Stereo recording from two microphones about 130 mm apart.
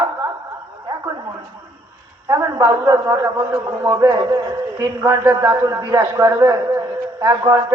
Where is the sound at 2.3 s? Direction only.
25° right (ahead or behind).